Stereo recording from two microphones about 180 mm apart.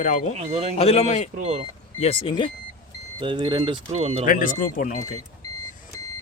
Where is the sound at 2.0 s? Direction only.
30° left (ahead or behind).